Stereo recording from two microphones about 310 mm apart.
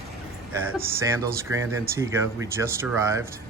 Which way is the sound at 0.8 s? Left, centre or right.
Centre.